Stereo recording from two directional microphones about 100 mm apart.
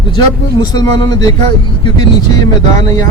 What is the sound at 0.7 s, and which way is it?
A man's voice, 40° left (ahead or behind).